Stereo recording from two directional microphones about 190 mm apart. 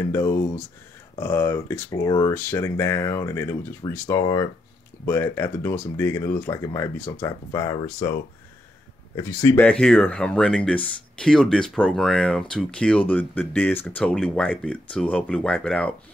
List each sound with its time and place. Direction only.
0.0 s speech: 15° left (ahead or behind)
9.1 s speech: 15° left (ahead or behind)